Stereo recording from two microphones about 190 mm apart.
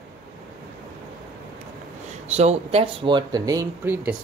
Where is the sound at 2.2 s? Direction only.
35° right (ahead or behind); by 4.1 s 10° right (ahead or behind).